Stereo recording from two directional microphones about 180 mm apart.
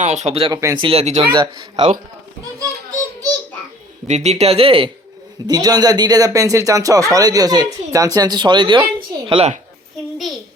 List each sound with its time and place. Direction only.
0.0 s speech: 40° right (ahead or behind)
0.6 s speech: 20° right (ahead or behind)
0.9 s speech: 35° right (ahead or behind)
1.3 s speech: 25° right (ahead or behind)
4.0 s speech: 40° right (ahead or behind)
5.5 s speech: 20° right (ahead or behind)
9.0 s a sound: 30° right (ahead or behind)